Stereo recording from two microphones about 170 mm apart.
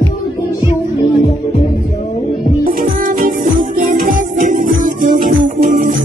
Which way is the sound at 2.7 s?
55° right (ahead or behind).